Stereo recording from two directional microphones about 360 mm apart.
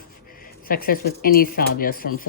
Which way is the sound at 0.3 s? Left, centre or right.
Left.